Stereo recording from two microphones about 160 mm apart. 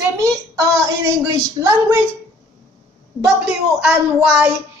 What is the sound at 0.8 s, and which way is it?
A woman's voice, 20° right (ahead or behind).